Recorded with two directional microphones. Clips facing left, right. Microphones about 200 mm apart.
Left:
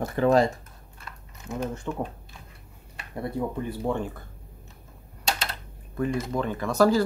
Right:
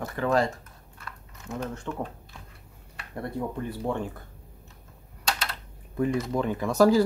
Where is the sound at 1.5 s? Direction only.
10° left (ahead or behind).